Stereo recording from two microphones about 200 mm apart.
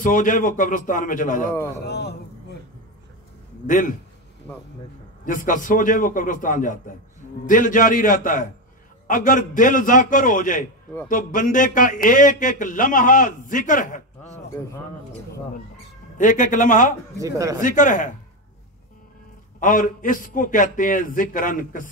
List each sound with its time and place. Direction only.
0.0 s speech: 40° left (ahead or behind)
1.9 s a man's voice: 55° left (ahead or behind)
3.6 s speech: 40° left (ahead or behind)
5.2 s speech: 40° left (ahead or behind)
16.2 s speech: 40° left (ahead or behind)
17.2 s a man's voice: 15° right (ahead or behind)
17.6 s speech: 40° left (ahead or behind)
19.6 s a man's voice: 45° left (ahead or behind)